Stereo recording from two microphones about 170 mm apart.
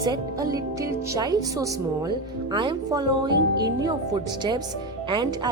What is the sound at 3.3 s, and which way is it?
Speech, 90° right.